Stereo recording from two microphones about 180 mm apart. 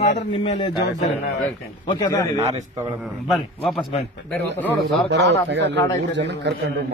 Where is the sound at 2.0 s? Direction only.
15° left (ahead or behind).